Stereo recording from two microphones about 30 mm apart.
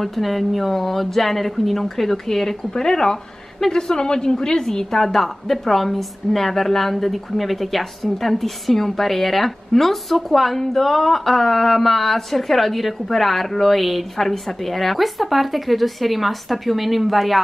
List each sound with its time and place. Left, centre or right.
0.0 s a woman's voice: centre; by 4.8 s left
4.9 s a woman's voice: centre
10.6 s a sound: centre
14.1 s a woman's voice: centre